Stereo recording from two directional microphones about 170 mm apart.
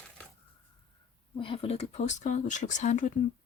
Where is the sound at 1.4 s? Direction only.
35° left (ahead or behind).